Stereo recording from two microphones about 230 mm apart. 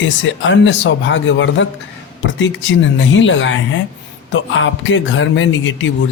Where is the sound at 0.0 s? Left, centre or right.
Left.